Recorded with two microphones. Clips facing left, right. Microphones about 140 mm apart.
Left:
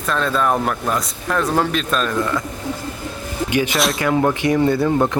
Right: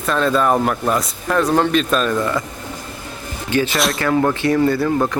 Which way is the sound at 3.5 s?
15° left (ahead or behind).